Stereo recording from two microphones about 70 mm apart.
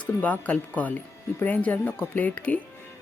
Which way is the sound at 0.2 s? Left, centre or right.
Left.